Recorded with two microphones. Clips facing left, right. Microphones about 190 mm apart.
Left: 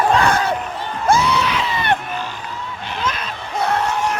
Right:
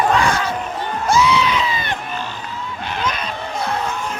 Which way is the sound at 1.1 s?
60° left (ahead or behind).